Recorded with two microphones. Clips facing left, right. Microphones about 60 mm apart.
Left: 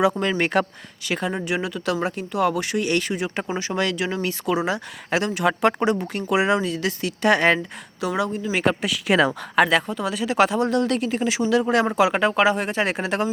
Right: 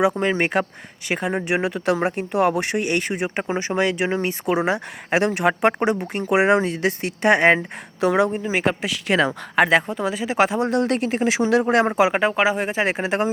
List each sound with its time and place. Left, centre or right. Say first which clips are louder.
0.2 s speech: right 1 dB; right
6.3 s speech: right 3 dB; right
8.0 s speech: right 5 dB; right
8.5 s speech: left 3 dB; centre
9.0 s speech: left 1 dB; centre
9.6 s speech: right 2 dB; centre
10.5 s speech: even; centre
10.8 s speech: right 1 dB; right
12.4 s speech: even; centre